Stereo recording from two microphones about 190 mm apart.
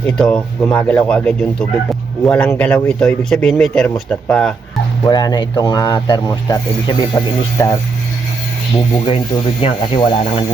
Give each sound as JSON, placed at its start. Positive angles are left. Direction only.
{"t": 0.2, "sound": "speech", "side_deg": 5}
{"t": 5.0, "sound": "speech", "side_deg": 20}
{"t": 8.7, "sound": "speech", "side_deg": 30}